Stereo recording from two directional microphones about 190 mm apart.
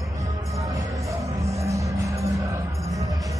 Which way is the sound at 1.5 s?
15° right (ahead or behind).